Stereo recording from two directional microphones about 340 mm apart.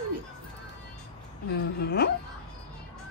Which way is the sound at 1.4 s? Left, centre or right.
Left.